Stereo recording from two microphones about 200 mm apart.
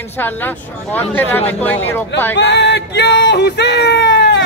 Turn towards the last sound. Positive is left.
turn(degrees=55)  # may be behind; listen again after turning